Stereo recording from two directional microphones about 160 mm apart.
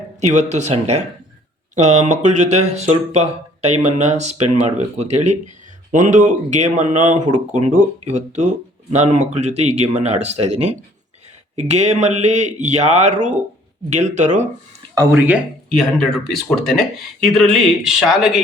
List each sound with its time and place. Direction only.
0.2 s speech: 45° right (ahead or behind)
15.7 s speech: 5° left (ahead or behind)